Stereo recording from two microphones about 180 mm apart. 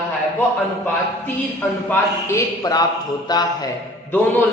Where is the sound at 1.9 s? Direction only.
15° left (ahead or behind).